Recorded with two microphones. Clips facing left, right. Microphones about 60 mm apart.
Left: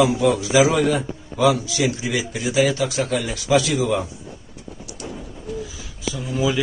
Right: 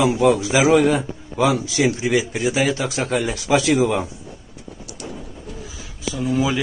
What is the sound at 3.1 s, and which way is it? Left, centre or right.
Speech, right.